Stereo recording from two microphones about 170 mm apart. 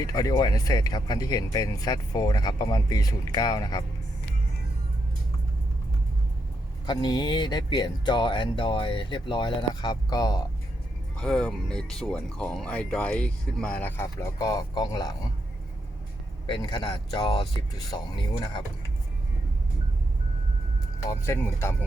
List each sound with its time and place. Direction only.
0.0 s speech: 20° left (ahead or behind)
6.8 s speech: 25° left (ahead or behind)
11.2 s speech: 5° left (ahead or behind); by 15.1 s 25° left (ahead or behind)
16.5 s speech: 30° left (ahead or behind)
21.1 s speech: 15° left (ahead or behind)